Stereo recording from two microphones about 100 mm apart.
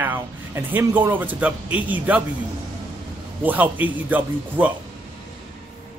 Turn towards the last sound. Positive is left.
turn(degrees=-15)  # may be behind; listen again after turning